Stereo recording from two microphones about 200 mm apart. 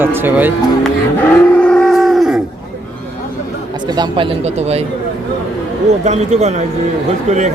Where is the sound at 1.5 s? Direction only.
5° left (ahead or behind).